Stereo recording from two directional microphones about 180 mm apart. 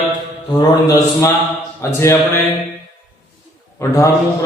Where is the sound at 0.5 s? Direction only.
20° left (ahead or behind).